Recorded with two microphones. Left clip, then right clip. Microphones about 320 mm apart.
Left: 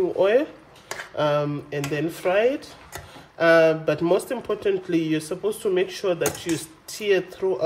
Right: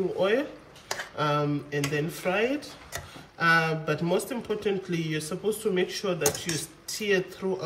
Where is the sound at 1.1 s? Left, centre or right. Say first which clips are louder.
Left 5 dB; left.